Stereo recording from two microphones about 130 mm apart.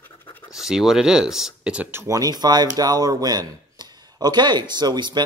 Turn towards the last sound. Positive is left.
turn(degrees=-35)  # may be behind; listen again after turning